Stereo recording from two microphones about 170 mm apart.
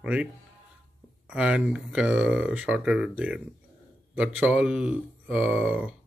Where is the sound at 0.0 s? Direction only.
5° right (ahead or behind).